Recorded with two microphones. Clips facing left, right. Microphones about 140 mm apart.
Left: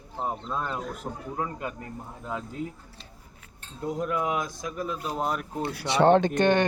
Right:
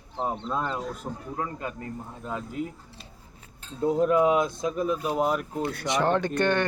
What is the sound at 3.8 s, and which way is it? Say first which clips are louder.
Speech: right 7 dB; 30° right (ahead or behind).